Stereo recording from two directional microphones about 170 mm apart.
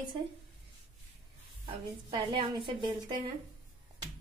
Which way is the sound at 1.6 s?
30° right (ahead or behind).